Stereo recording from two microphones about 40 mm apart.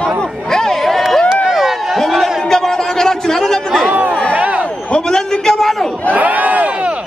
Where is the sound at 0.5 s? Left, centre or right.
Centre.